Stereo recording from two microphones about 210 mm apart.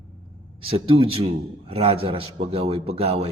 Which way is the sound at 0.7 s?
25° right (ahead or behind).